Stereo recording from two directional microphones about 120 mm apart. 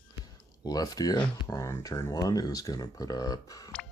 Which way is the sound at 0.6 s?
30° left (ahead or behind).